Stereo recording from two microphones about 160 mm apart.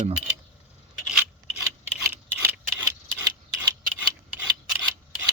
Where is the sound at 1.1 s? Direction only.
5° right (ahead or behind).